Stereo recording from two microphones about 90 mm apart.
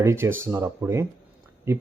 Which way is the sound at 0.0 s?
30° right (ahead or behind).